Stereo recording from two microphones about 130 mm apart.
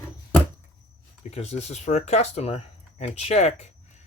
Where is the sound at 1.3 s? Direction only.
55° left (ahead or behind).